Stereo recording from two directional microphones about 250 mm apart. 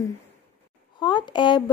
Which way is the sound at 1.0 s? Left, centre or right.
Centre.